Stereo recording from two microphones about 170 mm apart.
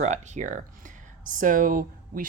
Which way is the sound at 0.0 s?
45° right (ahead or behind).